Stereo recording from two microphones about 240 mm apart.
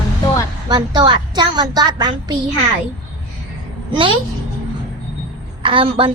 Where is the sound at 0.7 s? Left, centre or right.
Centre.